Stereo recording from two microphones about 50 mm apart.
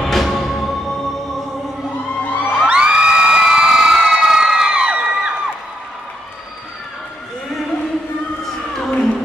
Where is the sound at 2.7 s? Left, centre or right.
Centre.